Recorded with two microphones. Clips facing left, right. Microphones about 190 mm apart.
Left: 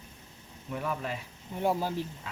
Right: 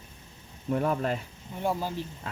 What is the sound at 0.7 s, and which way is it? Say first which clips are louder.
Speech: right 7 dB; 45° right (ahead or behind).